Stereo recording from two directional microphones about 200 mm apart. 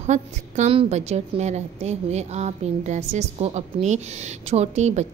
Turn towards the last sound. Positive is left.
turn(degrees=-35)  # may be behind; listen again after turning